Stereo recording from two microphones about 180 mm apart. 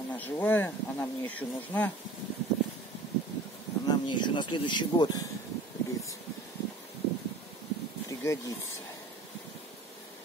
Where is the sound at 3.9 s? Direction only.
25° left (ahead or behind).